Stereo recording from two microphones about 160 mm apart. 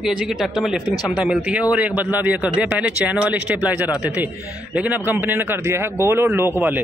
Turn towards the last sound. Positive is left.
turn(degrees=-15)  # may be behind; listen again after turning